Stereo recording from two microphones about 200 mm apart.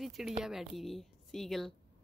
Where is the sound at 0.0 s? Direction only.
Centre (ahead or behind).